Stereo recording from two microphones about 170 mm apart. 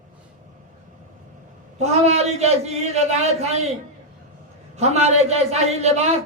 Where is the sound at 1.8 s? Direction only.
40° right (ahead or behind).